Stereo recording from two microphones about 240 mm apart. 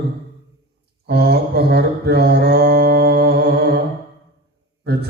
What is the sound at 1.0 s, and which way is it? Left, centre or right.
Mantra, right.